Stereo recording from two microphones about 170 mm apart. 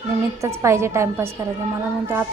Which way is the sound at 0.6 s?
15° right (ahead or behind).